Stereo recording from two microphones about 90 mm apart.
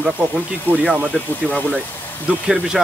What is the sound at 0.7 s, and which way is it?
Speech, 20° left (ahead or behind).